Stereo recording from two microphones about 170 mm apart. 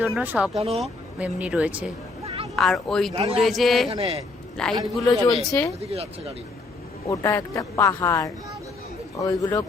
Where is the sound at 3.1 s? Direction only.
35° right (ahead or behind).